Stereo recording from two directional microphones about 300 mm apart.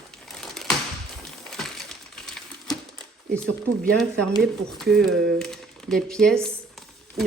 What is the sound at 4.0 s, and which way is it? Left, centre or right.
Speech, centre.